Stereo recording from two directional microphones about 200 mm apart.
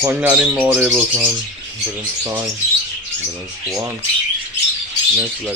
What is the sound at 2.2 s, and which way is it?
Speech, 15° right (ahead or behind).